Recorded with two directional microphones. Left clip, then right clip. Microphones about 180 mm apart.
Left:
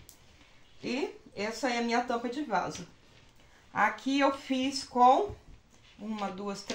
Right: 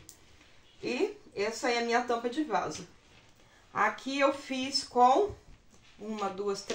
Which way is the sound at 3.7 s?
15° right (ahead or behind).